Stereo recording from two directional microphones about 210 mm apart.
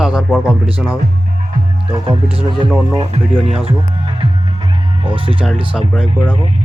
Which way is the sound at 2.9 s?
25° right (ahead or behind).